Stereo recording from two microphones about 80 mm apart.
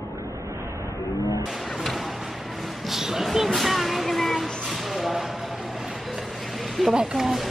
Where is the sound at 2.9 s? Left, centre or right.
Centre.